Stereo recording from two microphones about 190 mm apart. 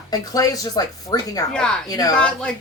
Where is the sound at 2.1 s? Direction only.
5° left (ahead or behind).